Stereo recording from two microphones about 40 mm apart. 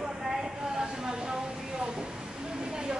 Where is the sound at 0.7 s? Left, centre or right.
Centre.